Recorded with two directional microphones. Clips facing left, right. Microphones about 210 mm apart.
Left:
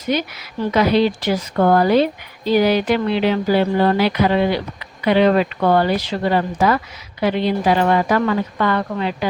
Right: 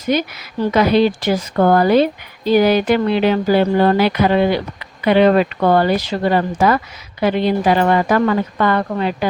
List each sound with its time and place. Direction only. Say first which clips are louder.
0.1 s speech: right 2 dB; 50° right (ahead or behind)